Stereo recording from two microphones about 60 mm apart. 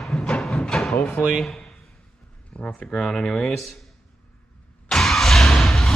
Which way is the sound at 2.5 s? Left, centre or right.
Centre.